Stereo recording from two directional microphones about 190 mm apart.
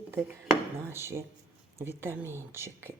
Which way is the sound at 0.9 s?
15° right (ahead or behind).